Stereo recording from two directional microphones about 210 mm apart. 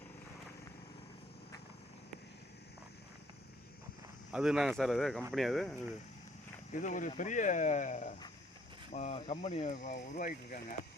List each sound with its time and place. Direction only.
4.3 s speech: 5° right (ahead or behind)
6.7 s speech: 40° left (ahead or behind)